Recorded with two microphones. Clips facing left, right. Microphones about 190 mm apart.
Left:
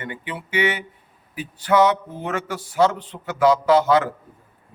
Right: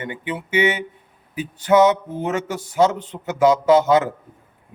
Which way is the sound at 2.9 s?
45° right (ahead or behind).